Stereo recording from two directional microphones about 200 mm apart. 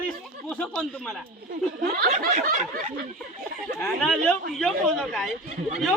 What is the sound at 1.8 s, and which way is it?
Speech, 45° right (ahead or behind).